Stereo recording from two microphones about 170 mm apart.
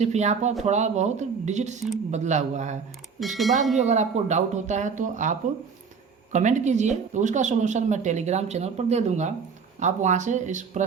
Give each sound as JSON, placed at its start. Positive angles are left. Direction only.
{"t": 0.0, "sound": "speech", "side_deg": -40}
{"t": 3.2, "sound": "speech", "side_deg": 0}
{"t": 3.8, "sound": "speech", "side_deg": -45}